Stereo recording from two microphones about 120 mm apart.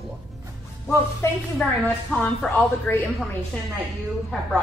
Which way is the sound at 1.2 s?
25° left (ahead or behind).